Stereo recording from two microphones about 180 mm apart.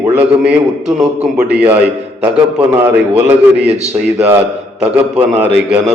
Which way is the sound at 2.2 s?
10° right (ahead or behind).